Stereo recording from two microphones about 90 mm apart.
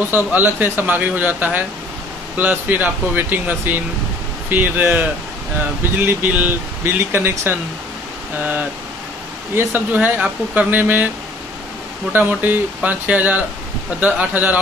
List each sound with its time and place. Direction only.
0.1 s speech: 20° right (ahead or behind)
9.6 s speech: 20° right (ahead or behind)
12.1 s speech: 20° right (ahead or behind)